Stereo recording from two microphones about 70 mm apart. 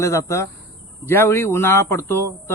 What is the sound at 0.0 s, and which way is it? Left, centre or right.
Speech, left.